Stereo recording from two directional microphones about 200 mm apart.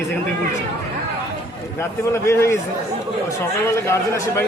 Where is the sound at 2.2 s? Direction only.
15° left (ahead or behind).